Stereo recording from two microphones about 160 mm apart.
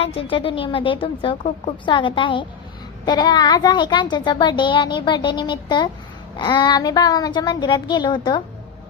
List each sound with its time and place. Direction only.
0.0 s a woman's voice: 35° left (ahead or behind)